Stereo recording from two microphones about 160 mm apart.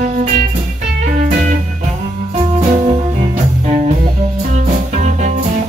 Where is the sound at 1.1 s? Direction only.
55° right (ahead or behind).